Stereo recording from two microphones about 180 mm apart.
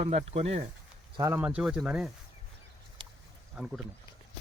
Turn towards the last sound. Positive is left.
turn(degrees=0)  # may be behind; listen again after turning